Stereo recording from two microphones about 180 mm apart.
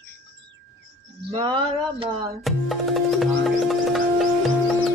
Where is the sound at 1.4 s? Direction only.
30° right (ahead or behind).